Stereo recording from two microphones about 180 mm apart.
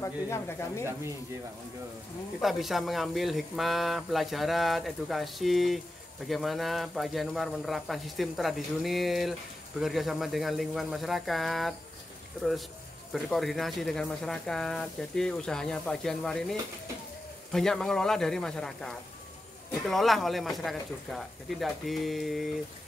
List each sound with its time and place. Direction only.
0.0 s speech: 15° left (ahead or behind)
2.4 s speech: centre (ahead or behind)
13.1 s speech: centre (ahead or behind)